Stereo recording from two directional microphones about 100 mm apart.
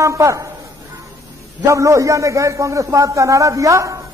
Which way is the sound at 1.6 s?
30° right (ahead or behind).